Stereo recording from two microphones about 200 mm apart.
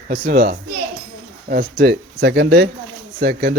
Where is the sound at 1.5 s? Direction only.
50° right (ahead or behind).